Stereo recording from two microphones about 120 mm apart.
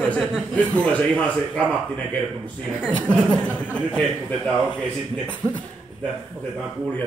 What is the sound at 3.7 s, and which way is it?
A man's voice, 10° left (ahead or behind).